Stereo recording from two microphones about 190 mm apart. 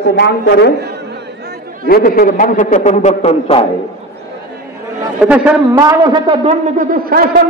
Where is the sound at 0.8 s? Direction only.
60° right (ahead or behind).